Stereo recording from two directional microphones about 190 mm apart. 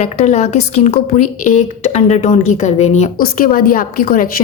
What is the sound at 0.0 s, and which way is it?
A woman's voice, 40° left (ahead or behind).